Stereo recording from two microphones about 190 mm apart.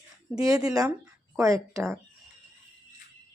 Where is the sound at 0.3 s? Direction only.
20° right (ahead or behind).